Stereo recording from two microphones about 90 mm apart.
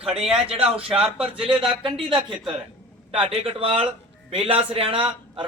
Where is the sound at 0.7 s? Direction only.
90° right.